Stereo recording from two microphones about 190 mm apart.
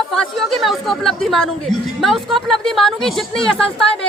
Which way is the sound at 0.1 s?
Centre (ahead or behind).